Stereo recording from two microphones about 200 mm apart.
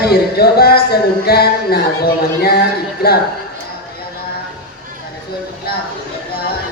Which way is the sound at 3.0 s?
50° left (ahead or behind).